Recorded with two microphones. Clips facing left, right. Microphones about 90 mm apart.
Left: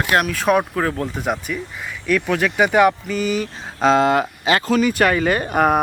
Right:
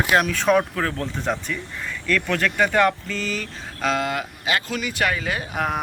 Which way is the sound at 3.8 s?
30° left (ahead or behind).